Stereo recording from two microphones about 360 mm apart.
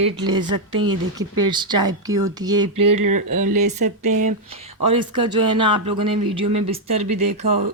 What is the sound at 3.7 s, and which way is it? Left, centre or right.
Speech, centre.